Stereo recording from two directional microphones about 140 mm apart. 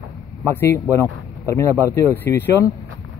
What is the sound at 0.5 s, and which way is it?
Speech, 20° left (ahead or behind).